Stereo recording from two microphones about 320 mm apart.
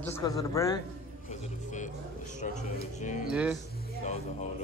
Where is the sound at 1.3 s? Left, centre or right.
Left.